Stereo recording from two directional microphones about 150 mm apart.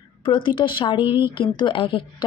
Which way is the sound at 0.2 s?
30° left (ahead or behind).